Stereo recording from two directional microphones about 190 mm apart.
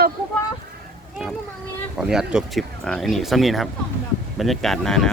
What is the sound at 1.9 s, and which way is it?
Speech, 5° right (ahead or behind).